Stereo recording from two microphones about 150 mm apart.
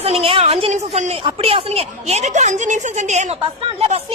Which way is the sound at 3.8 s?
40° right (ahead or behind).